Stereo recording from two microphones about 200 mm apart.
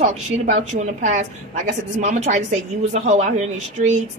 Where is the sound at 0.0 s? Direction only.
40° right (ahead or behind).